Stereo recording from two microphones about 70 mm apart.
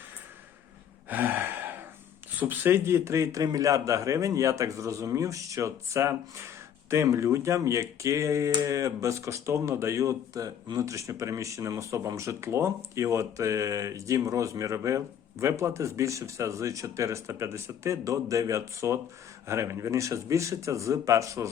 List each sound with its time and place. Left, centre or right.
1.1 s gasp: right
2.4 s speech: right